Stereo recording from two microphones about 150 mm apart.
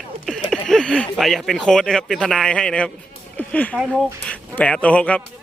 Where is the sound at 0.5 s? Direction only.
5° left (ahead or behind).